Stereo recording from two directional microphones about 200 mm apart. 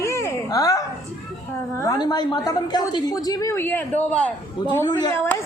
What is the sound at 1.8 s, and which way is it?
Speech, 20° left (ahead or behind).